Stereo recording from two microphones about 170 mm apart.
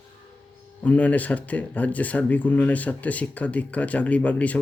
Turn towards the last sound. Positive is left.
turn(degrees=10)  # may be behind; listen again after turning